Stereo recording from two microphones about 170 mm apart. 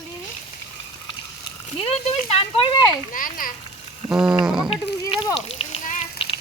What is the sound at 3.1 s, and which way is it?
Speech, 55° left (ahead or behind).